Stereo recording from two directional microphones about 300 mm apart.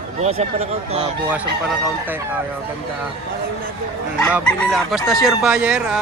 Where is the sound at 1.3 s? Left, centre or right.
Centre.